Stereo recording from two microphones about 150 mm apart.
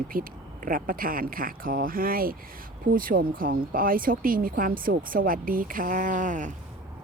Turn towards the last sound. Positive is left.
turn(degrees=-55)  # may be behind; listen again after turning